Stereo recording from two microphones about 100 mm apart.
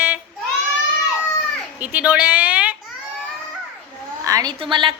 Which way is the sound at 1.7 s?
15° right (ahead or behind).